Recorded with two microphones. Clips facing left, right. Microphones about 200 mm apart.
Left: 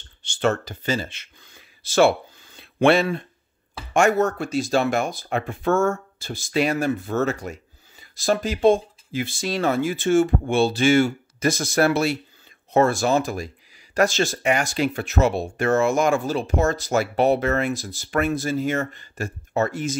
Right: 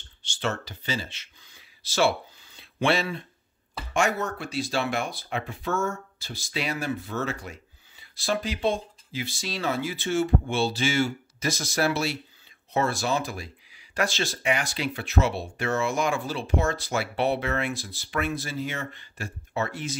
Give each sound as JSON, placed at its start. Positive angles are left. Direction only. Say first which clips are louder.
{"t": 0.2, "sound": "speech", "louder": "left 8 dB", "side_deg": 50}